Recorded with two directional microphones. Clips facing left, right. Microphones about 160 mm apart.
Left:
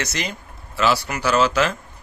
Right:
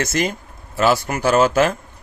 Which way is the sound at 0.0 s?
50° right (ahead or behind).